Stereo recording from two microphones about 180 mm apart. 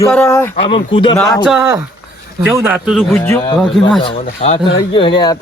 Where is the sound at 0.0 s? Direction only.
10° left (ahead or behind).